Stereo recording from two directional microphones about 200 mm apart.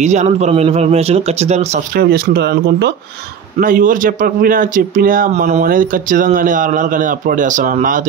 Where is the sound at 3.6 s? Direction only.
40° right (ahead or behind).